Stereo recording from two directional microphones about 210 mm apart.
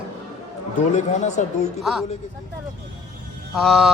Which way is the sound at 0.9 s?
35° left (ahead or behind).